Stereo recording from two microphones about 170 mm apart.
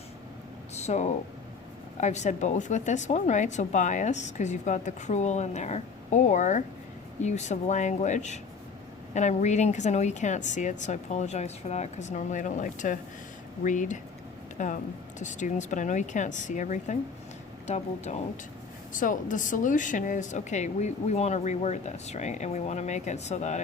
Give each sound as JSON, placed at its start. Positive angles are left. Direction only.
{"t": 0.8, "sound": "speech", "side_deg": 40}